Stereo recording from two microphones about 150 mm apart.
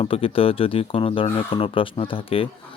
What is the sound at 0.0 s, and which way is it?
Speech, 40° left (ahead or behind).